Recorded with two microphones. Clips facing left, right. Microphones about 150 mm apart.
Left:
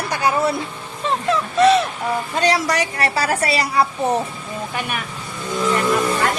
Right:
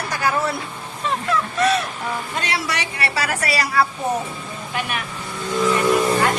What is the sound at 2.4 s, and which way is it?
A woman's voice, 40° left (ahead or behind).